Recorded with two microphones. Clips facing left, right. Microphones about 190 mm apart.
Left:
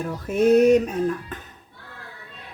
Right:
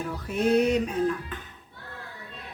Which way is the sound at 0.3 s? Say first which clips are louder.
Left 7 dB; 45° left (ahead or behind).